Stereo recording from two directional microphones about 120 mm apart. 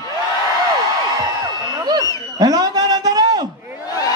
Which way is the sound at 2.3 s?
35° right (ahead or behind).